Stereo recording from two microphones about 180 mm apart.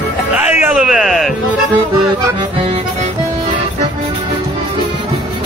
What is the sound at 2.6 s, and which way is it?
Music, 35° right (ahead or behind).